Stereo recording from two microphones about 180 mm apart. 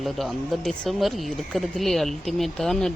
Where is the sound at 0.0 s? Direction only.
Centre (ahead or behind).